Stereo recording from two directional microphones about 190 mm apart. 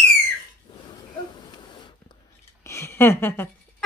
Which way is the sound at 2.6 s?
15° left (ahead or behind).